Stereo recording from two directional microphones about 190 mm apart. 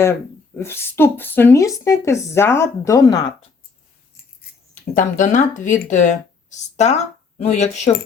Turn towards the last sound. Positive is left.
turn(degrees=35)  # may be behind; listen again after turning